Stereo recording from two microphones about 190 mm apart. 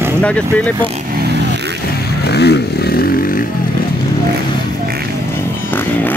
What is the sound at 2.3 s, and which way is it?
Vehicle, 60° left (ahead or behind).